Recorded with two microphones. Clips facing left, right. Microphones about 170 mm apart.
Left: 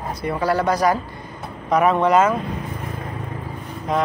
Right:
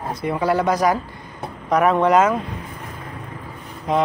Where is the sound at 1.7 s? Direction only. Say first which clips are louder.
Even; centre (ahead or behind).